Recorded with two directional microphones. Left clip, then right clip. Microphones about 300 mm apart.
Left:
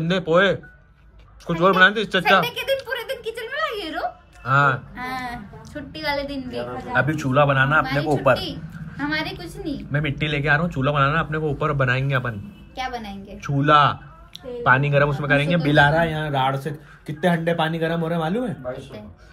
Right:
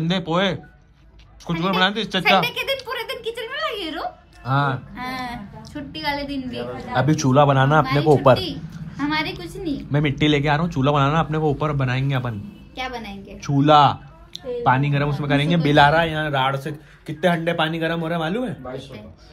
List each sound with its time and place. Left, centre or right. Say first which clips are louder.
0.0 s speech: left 4 dB; centre
1.5 s a sound: left 5 dB; centre
4.5 s speech: left 4 dB; centre
4.9 s a woman's voice: even; centre
6.9 s speech: right 2 dB; centre
8.9 s speech: right 2 dB; centre
15.9 s speech: right 2 dB; centre